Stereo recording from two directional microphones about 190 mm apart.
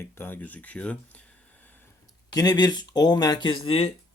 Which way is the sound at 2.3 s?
20° left (ahead or behind).